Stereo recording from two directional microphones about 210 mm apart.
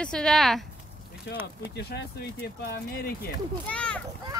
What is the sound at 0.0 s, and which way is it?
Speech, 5° left (ahead or behind).